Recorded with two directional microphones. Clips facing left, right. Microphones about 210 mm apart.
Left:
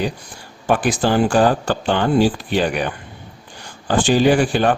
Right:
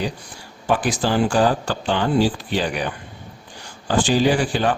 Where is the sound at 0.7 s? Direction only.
55° left (ahead or behind).